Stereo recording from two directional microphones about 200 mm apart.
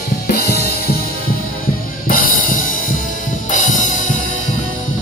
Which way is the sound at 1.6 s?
45° left (ahead or behind).